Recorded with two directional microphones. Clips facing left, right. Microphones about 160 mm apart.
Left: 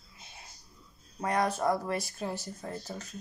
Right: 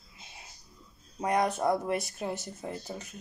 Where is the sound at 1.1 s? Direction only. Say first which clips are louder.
Right 2 dB; 15° right (ahead or behind).